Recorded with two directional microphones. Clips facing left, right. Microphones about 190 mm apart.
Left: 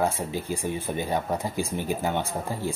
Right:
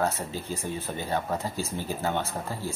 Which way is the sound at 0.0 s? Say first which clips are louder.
Left 2 dB; 15° left (ahead or behind).